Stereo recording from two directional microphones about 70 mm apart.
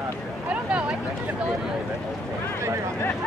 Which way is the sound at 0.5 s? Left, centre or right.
Centre.